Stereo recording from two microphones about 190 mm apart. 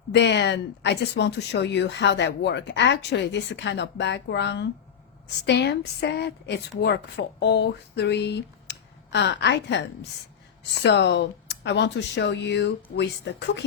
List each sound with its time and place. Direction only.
0.1 s speech: 65° left (ahead or behind)